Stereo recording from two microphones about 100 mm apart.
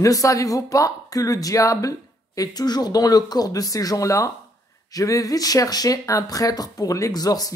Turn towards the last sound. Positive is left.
turn(degrees=40)  # may be behind; listen again after turning